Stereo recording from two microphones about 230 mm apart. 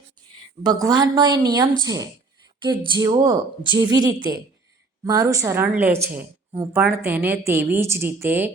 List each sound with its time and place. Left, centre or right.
0.6 s a woman's voice: centre